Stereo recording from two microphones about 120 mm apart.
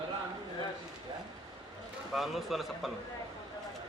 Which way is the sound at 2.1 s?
Centre (ahead or behind).